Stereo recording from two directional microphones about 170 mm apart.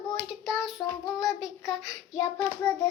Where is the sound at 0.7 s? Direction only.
20° left (ahead or behind).